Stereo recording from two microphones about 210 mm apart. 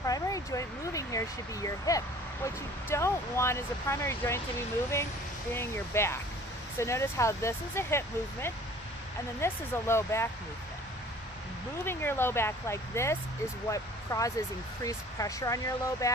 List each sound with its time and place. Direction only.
0.0 s a sound: 15° left (ahead or behind)
1.6 s speech: 15° left (ahead or behind)
5.5 s speech: 10° left (ahead or behind)
11.9 s speech: 10° left (ahead or behind)